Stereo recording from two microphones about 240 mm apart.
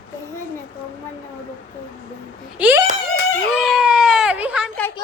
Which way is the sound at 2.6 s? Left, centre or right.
Centre.